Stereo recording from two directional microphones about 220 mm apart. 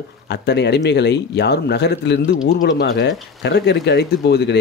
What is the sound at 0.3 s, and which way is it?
Speech, 50° left (ahead or behind).